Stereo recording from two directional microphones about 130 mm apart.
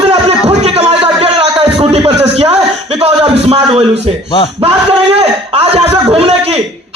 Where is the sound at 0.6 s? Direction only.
50° right (ahead or behind).